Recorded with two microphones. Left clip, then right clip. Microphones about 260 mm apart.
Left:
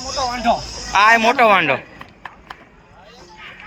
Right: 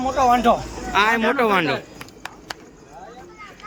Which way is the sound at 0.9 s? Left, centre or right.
Centre.